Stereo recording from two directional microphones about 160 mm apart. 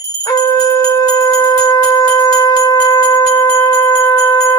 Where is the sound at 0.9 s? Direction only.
25° left (ahead or behind).